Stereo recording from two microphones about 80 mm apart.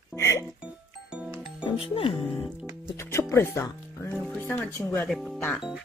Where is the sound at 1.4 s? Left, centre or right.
Left.